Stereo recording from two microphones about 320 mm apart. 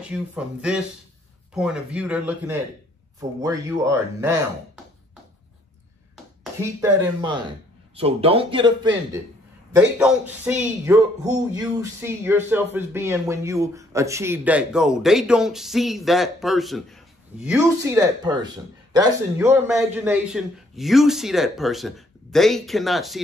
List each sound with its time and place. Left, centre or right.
0.0 s a man's voice: centre
6.6 s a man's voice: centre